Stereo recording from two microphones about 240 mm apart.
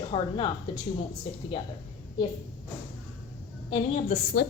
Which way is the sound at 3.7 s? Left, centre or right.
Left.